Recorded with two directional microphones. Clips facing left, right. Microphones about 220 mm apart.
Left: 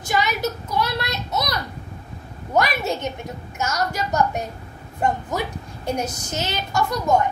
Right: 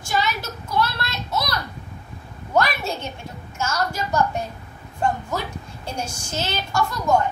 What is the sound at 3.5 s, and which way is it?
Speech, 15° left (ahead or behind).